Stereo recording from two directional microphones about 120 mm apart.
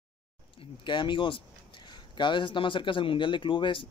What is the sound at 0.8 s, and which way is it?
Speech, 40° left (ahead or behind).